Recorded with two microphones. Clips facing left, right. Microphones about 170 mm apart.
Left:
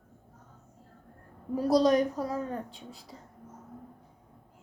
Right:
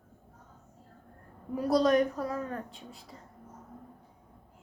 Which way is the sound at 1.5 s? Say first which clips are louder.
Left 1 dB; 35° left (ahead or behind).